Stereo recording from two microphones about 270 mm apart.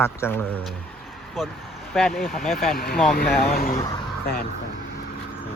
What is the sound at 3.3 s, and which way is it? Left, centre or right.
Speech, left.